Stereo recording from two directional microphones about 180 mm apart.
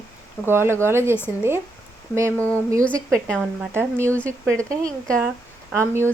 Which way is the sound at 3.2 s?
5° left (ahead or behind).